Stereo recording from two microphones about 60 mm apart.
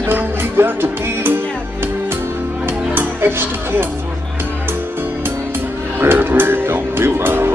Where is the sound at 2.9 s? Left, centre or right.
Right.